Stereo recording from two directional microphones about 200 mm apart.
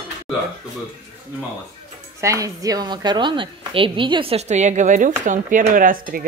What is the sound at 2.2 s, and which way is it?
A woman's voice, 15° right (ahead or behind).